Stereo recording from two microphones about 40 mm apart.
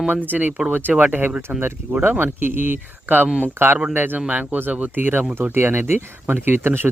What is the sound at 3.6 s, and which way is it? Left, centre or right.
Speech, right.